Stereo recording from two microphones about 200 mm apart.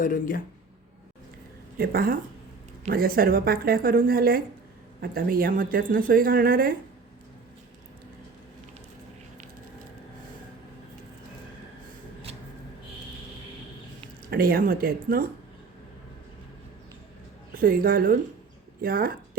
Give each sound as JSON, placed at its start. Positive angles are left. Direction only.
{"t": 0.0, "sound": "speech", "side_deg": 45}
{"t": 1.8, "sound": "a woman's voice", "side_deg": -50}
{"t": 14.3, "sound": "a woman's voice", "side_deg": -50}
{"t": 17.5, "sound": "a woman's voice", "side_deg": -45}